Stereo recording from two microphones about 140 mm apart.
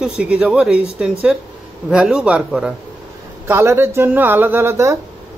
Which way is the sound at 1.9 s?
5° right (ahead or behind).